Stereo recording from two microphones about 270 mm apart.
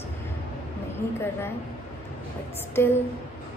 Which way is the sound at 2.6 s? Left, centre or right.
Centre.